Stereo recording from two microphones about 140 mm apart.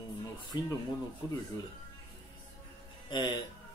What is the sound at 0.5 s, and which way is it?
Speech, 30° left (ahead or behind).